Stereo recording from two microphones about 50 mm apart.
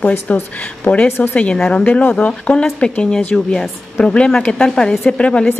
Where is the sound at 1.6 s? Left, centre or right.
Centre.